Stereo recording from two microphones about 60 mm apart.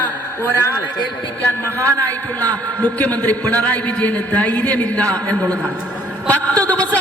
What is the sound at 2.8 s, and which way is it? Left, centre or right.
A man's voice, left.